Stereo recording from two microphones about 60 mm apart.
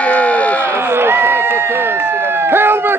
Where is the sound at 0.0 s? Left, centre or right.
Left.